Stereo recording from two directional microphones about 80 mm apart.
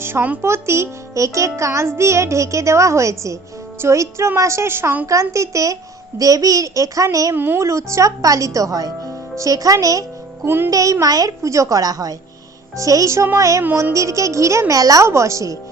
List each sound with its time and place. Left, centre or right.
0.0 s a child's voice: right
7.3 s music: right
7.6 s a woman's voice: right
10.4 s music: right
10.7 s a woman's voice: right